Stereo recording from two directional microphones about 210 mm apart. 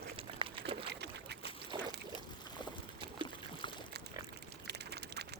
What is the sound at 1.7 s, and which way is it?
Pour, 20° right (ahead or behind).